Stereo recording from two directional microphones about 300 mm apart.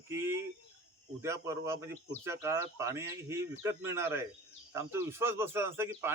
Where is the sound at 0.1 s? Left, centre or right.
Centre.